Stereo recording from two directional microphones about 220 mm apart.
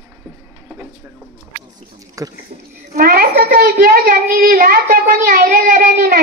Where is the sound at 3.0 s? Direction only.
45° right (ahead or behind).